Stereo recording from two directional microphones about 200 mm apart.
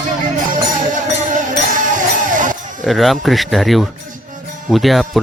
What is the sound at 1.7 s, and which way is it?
Music, 40° right (ahead or behind).